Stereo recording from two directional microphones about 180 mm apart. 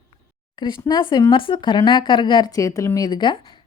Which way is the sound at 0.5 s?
25° left (ahead or behind).